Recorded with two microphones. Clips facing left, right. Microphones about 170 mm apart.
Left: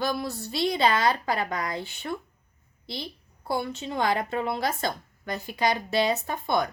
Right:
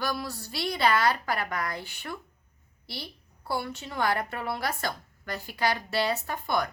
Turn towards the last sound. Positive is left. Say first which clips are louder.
# left 3 dB
turn(degrees=20)  # may be behind; listen again after turning